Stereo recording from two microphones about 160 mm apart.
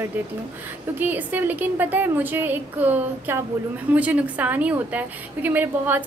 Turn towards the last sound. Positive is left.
turn(degrees=-10)  # may be behind; listen again after turning